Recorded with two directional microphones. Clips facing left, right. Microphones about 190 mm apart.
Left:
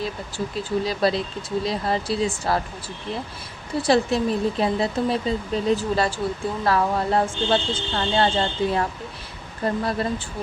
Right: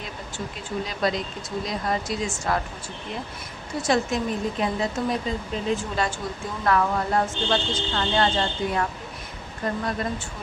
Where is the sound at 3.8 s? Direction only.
35° left (ahead or behind).